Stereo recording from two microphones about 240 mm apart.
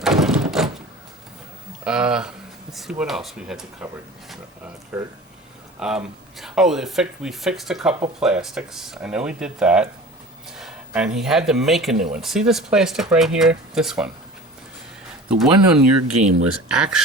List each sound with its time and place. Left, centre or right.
0.0 s a sound: centre
1.8 s speech: centre
15.3 s speech: centre
15.9 s speech: right
16.6 s speech: centre